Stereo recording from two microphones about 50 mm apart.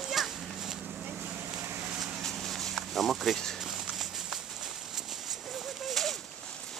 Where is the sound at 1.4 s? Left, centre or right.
Right.